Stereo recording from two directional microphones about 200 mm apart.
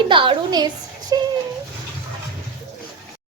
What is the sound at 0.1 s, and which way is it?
A woman's voice, 25° right (ahead or behind).